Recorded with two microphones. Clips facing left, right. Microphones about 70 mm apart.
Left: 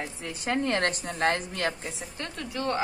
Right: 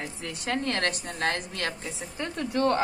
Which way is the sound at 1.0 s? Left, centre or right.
Left.